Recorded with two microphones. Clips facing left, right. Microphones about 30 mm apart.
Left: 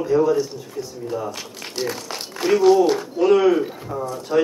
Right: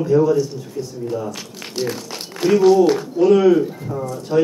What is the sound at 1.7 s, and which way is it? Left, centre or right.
A man's voice, centre.